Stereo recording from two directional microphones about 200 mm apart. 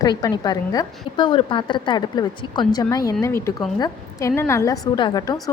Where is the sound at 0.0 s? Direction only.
20° left (ahead or behind).